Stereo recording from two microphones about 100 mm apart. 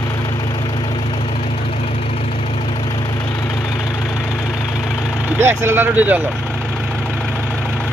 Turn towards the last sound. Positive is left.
turn(degrees=-15)  # may be behind; listen again after turning